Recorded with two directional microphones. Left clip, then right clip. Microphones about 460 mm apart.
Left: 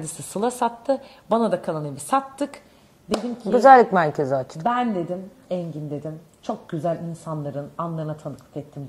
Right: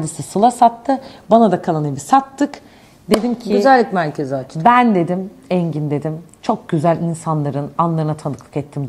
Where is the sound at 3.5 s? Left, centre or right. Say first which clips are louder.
Even; left.